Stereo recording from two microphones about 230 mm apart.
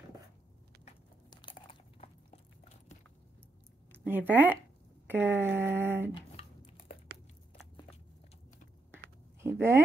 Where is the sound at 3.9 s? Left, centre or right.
Centre.